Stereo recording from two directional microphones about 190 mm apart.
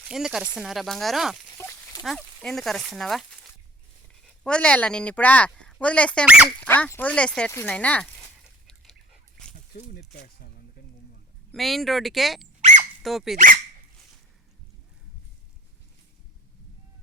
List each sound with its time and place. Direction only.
0.0 s speech: 5° right (ahead or behind)
1.5 s a sound: 10° left (ahead or behind)
2.0 s speech: centre (ahead or behind)
8.6 s chicken: 5° left (ahead or behind)
9.9 s speech: 55° left (ahead or behind)
11.5 s speech: centre (ahead or behind)
13.3 s speech: 45° right (ahead or behind)